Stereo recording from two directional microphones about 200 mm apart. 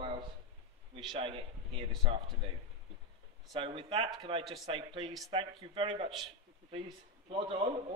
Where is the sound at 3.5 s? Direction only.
25° right (ahead or behind).